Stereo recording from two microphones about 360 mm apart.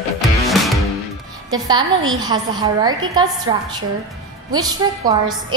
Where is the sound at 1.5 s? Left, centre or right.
Centre.